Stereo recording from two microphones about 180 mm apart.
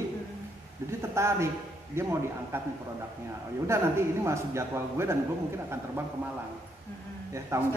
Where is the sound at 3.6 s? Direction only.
15° right (ahead or behind).